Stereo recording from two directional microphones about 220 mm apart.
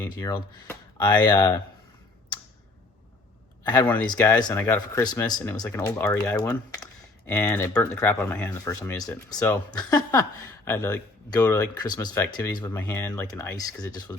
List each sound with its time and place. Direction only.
0.0 s speech: 10° left (ahead or behind)
3.6 s speech: 20° left (ahead or behind)